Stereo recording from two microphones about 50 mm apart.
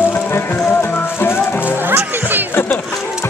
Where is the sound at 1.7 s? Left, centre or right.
Right.